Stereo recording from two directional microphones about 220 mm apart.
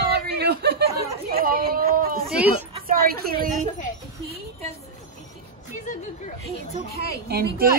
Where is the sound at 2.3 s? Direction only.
5° right (ahead or behind).